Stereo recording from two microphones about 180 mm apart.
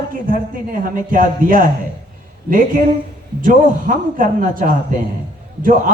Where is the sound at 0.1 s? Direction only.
50° right (ahead or behind).